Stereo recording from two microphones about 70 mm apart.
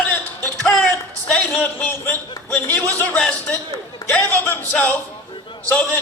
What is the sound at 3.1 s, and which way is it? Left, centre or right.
A man's voice, centre.